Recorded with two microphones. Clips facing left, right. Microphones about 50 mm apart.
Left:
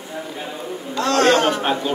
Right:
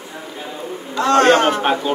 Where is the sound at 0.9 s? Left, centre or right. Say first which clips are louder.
Right 3 dB; right.